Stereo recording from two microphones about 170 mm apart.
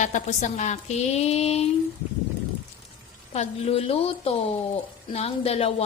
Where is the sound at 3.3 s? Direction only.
35° left (ahead or behind).